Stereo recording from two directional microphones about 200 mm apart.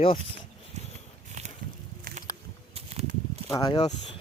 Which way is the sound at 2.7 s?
30° right (ahead or behind).